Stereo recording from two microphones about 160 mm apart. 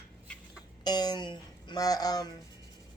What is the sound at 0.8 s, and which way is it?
Speech, 25° left (ahead or behind).